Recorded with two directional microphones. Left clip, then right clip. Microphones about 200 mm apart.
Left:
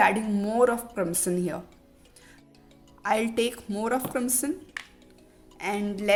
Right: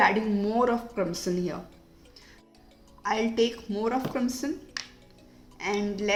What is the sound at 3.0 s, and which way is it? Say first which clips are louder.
A woman's voice: even; 55° left (ahead or behind).